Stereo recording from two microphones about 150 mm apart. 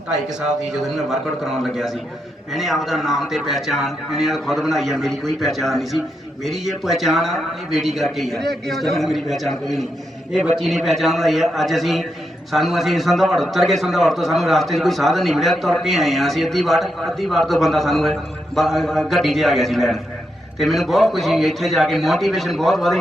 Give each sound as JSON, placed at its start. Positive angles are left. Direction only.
{"t": 0.3, "sound": "a man's voice", "side_deg": -5}